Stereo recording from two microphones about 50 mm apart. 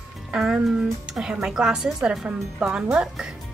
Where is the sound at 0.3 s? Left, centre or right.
Centre.